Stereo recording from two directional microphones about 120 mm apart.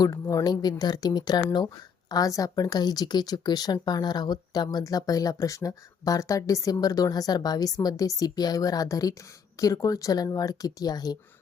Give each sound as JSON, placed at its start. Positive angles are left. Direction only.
{"t": 0.0, "sound": "speech", "side_deg": 30}